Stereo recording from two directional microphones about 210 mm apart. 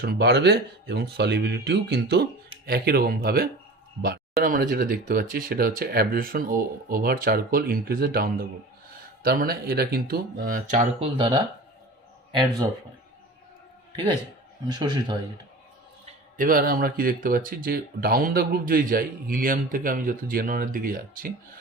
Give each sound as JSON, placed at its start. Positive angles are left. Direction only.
{"t": 0.0, "sound": "speech", "side_deg": -50}
{"t": 13.9, "sound": "a man's voice", "side_deg": -20}
{"t": 16.4, "sound": "speech", "side_deg": -40}